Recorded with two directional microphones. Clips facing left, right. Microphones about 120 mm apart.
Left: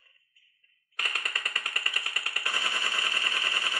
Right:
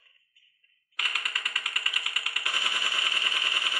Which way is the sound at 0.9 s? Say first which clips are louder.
Even; 35° left (ahead or behind).